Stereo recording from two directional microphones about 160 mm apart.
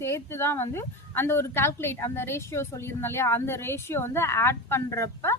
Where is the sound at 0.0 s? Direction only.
15° left (ahead or behind).